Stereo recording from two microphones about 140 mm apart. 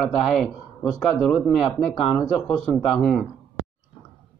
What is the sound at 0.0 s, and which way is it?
Speech, centre (ahead or behind).